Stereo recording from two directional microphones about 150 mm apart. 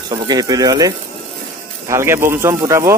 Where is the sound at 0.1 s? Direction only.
25° right (ahead or behind).